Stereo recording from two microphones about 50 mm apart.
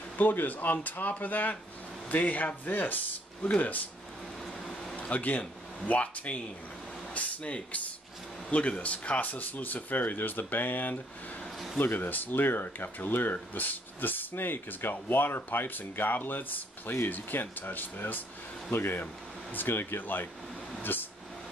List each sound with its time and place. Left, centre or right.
0.2 s speech: left
4.9 s speech: left
20.8 s a sound: left